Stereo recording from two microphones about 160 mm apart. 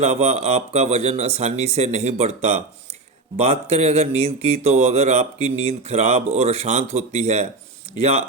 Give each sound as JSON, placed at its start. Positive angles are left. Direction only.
{"t": 0.0, "sound": "speech", "side_deg": -40}